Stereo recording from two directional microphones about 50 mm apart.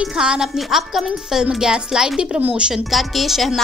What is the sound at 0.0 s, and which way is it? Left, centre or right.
Speech, centre.